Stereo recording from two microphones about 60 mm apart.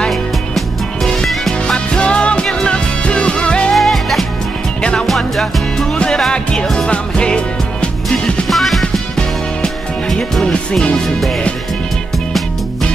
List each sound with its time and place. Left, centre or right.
0.1 s music: centre
2.0 s music: centre
3.7 s music: centre
8.5 s music: centre
10.1 s music: centre